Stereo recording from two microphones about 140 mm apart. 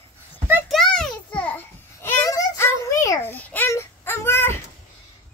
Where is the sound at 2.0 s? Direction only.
20° left (ahead or behind).